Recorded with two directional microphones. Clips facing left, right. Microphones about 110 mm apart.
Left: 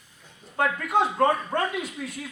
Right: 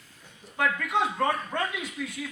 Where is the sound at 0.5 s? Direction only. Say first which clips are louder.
Left 3 dB; 35° left (ahead or behind).